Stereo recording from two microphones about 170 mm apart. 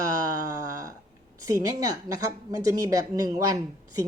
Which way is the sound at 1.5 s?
20° right (ahead or behind).